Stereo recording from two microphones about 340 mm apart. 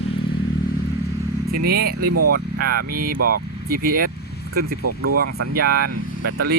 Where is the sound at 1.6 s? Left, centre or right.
Right.